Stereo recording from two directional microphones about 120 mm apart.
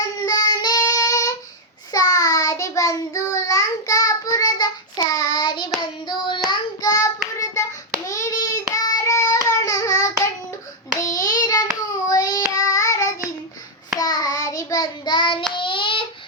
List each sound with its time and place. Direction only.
0.3 s child singing: 35° left (ahead or behind)
6.5 s child singing: 30° left (ahead or behind)
7.6 s hands: 25° left (ahead or behind)
12.0 s child singing: 30° left (ahead or behind)